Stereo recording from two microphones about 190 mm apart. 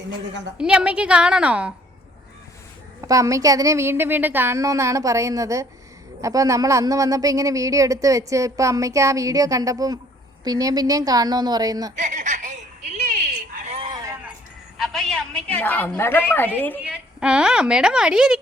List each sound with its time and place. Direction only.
0.5 s a woman's voice: 5° right (ahead or behind)
3.0 s a woman's voice: 15° right (ahead or behind)
11.9 s chuckle: 40° right (ahead or behind)
13.5 s a sound: 35° right (ahead or behind); by 14.3 s 15° right (ahead or behind)
14.8 s a sound: centre (ahead or behind)
16.6 s a woman's voice: 10° left (ahead or behind)
16.8 s a woman's voice: 5° right (ahead or behind)